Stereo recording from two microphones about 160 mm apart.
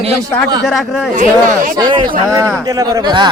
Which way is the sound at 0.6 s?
Centre (ahead or behind).